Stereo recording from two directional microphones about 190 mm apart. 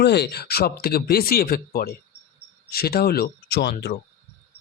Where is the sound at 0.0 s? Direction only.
60° left (ahead or behind).